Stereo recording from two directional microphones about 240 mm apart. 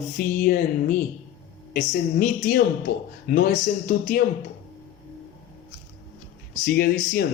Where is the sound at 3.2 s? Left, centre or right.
Left.